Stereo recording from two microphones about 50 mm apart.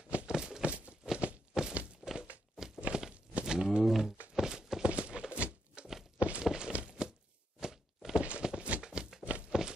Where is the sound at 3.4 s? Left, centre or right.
Centre.